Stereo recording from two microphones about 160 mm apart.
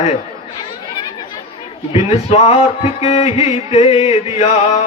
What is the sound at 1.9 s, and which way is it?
A man's voice, 40° left (ahead or behind).